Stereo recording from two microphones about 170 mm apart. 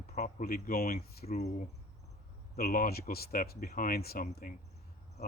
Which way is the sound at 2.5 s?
55° left (ahead or behind).